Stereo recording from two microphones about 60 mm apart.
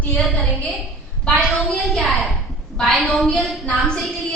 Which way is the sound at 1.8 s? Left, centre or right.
Centre.